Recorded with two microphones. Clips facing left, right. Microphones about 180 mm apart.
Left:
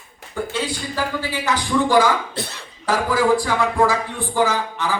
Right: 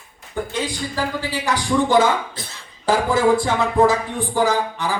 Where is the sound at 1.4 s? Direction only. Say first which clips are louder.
Right 1 dB; 20° right (ahead or behind).